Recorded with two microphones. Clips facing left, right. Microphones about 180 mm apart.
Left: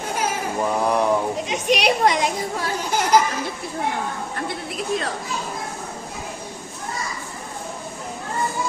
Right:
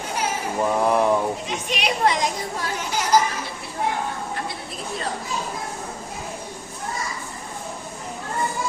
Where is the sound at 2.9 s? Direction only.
55° left (ahead or behind).